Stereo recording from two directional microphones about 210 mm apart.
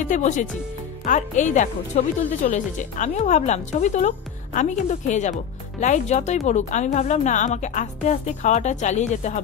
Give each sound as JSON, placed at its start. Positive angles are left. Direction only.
{"t": 0.0, "sound": "speech", "side_deg": 35}